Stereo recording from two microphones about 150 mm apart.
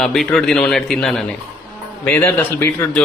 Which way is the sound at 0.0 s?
Centre (ahead or behind).